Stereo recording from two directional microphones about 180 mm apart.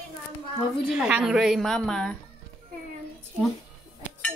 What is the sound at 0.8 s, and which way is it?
A woman's voice, 5° right (ahead or behind).